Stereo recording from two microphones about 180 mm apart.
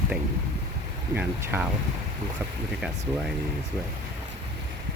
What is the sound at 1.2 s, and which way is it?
Speech, 10° right (ahead or behind).